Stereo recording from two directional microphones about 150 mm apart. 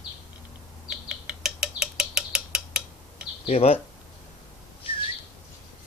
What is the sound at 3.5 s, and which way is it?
Speech, 45° left (ahead or behind).